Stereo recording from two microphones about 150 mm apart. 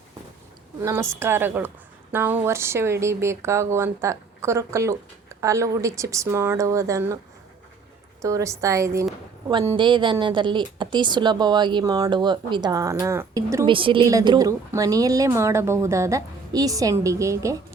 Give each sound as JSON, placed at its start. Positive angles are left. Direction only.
{"t": 0.8, "sound": "speech", "side_deg": -20}
{"t": 8.2, "sound": "speech", "side_deg": -20}
{"t": 9.7, "sound": "speech", "side_deg": -30}
{"t": 13.7, "sound": "speech", "side_deg": -35}
{"t": 14.1, "sound": "speech", "side_deg": -20}